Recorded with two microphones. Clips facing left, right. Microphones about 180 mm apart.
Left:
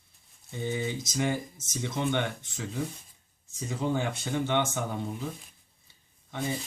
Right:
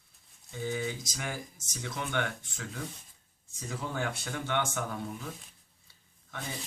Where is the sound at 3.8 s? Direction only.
20° left (ahead or behind).